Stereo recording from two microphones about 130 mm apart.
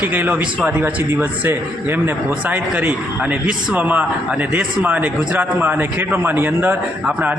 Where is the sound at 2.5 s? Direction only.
10° right (ahead or behind).